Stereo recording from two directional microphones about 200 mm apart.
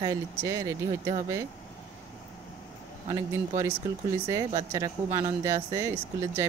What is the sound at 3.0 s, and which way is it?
Speech, 15° right (ahead or behind).